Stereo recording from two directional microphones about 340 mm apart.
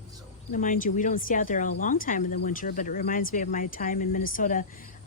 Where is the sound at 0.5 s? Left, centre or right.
Left.